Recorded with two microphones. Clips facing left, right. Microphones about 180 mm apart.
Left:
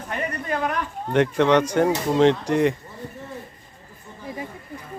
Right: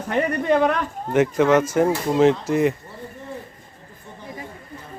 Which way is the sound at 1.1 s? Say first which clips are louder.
Right 1 dB; 5° right (ahead or behind).